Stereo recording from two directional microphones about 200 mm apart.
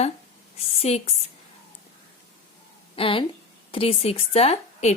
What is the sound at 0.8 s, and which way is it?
Speech, 30° left (ahead or behind).